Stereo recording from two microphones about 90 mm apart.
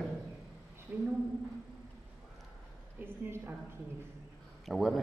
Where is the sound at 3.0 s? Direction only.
25° right (ahead or behind).